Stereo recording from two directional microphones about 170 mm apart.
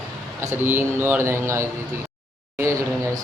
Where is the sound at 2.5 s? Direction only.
15° right (ahead or behind).